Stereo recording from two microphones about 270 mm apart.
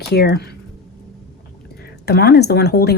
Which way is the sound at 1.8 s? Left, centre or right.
Left.